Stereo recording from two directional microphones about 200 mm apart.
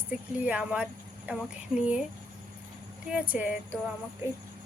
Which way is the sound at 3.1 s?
5° right (ahead or behind).